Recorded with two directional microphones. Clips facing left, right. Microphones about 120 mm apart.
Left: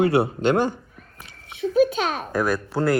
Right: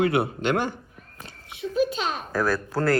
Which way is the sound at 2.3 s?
20° left (ahead or behind).